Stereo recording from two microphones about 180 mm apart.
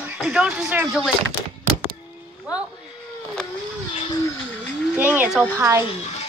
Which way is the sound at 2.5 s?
5° right (ahead or behind).